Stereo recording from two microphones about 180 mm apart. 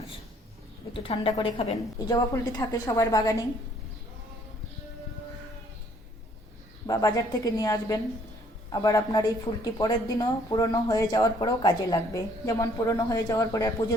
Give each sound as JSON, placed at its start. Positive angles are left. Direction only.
{"t": 1.0, "sound": "speech", "side_deg": 30}
{"t": 6.8, "sound": "speech", "side_deg": 20}